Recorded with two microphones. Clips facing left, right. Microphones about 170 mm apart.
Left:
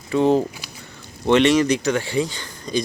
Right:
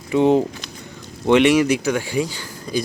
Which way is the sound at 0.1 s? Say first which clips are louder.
Right 2 dB; 15° right (ahead or behind).